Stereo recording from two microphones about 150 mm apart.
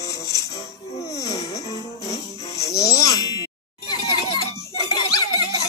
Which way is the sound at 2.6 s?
20° left (ahead or behind).